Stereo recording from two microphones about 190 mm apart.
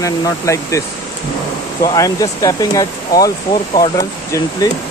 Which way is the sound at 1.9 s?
15° left (ahead or behind).